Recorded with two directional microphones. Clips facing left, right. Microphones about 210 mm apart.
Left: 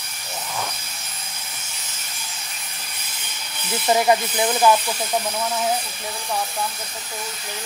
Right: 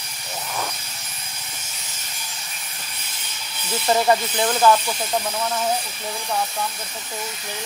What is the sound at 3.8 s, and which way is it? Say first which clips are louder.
Speech: left 1 dB; 10° left (ahead or behind).